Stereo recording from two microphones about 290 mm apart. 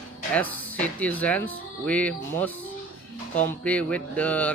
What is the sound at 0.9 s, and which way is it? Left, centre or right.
Speech, centre.